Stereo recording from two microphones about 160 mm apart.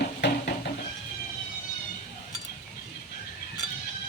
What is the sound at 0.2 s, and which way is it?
Music, 90° left.